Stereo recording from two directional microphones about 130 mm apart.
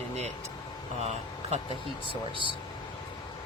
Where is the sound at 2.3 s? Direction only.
40° right (ahead or behind).